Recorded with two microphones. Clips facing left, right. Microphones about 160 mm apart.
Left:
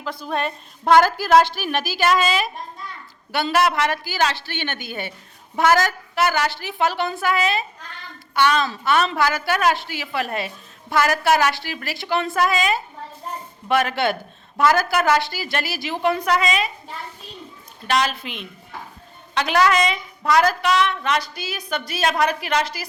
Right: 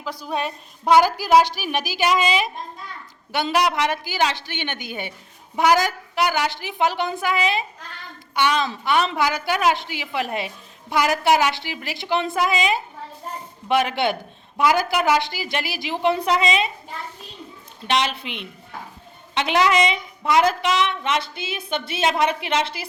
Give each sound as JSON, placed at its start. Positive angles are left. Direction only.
{"t": 0.0, "sound": "a woman's voice", "side_deg": -10}
{"t": 17.8, "sound": "a woman's voice", "side_deg": -25}